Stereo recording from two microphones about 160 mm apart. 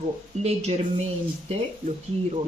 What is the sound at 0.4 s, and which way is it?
Speech, 40° right (ahead or behind).